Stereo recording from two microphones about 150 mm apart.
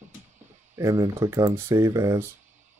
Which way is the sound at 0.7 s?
20° right (ahead or behind).